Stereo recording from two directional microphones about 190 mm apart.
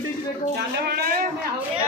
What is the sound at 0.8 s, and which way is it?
Speech, 55° right (ahead or behind).